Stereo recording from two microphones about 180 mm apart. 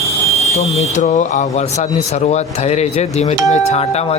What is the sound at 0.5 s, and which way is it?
Speech, 35° left (ahead or behind).